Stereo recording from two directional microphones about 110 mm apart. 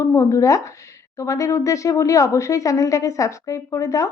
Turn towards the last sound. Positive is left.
turn(degrees=30)  # may be behind; listen again after turning